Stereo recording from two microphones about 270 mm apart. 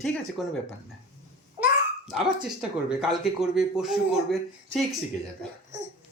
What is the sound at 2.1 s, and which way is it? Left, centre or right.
Speech, centre.